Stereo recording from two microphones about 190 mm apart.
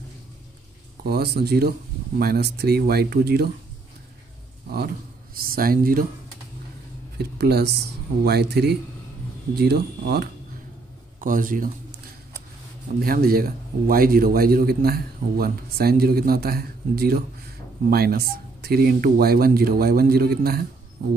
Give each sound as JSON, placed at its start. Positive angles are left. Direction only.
{"t": 1.0, "sound": "speech", "side_deg": -55}
{"t": 4.6, "sound": "speech", "side_deg": -55}
{"t": 7.2, "sound": "speech", "side_deg": -60}
{"t": 11.1, "sound": "a man's voice", "side_deg": -45}
{"t": 13.0, "sound": "a man's voice", "side_deg": -50}